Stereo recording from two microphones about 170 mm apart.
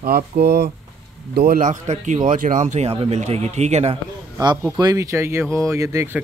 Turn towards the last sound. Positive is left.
turn(degrees=-15)  # may be behind; listen again after turning